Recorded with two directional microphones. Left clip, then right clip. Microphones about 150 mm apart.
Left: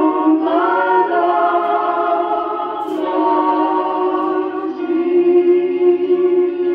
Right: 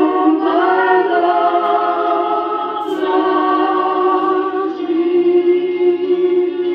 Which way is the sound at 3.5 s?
20° right (ahead or behind).